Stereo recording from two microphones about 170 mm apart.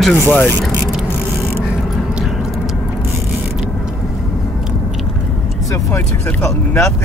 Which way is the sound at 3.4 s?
5° right (ahead or behind).